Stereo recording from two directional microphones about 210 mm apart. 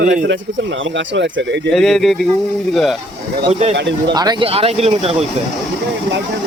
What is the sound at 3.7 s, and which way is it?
Speech, 55° right (ahead or behind).